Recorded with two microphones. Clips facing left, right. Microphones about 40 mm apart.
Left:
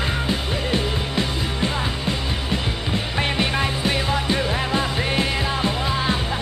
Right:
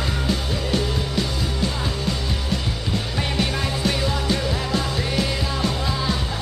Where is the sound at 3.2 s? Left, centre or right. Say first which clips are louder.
Left 4 dB; left.